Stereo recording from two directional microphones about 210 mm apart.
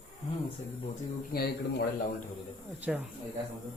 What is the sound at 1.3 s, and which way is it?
Speech, 50° left (ahead or behind).